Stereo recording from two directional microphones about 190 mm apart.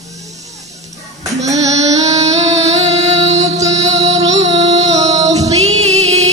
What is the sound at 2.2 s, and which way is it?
Music, 35° right (ahead or behind).